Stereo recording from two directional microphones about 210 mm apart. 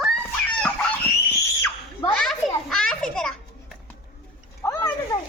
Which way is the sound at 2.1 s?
5° left (ahead or behind).